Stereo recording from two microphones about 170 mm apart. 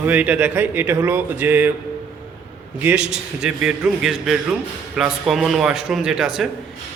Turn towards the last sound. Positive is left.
turn(degrees=-5)  # may be behind; listen again after turning